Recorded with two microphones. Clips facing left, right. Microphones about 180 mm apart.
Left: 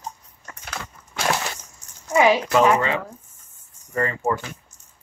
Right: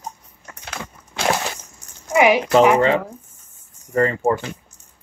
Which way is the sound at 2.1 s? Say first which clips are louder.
Right 2 dB; 15° right (ahead or behind).